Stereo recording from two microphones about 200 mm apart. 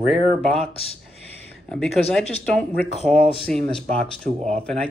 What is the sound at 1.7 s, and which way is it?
Speech, 5° left (ahead or behind).